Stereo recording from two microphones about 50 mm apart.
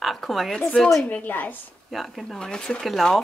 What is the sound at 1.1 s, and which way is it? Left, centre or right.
Speech, left.